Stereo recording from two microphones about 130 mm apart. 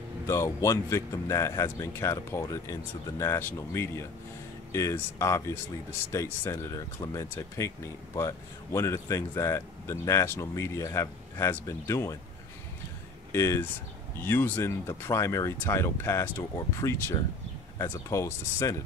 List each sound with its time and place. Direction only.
0.3 s speech: 20° left (ahead or behind)
13.3 s speech: 20° left (ahead or behind)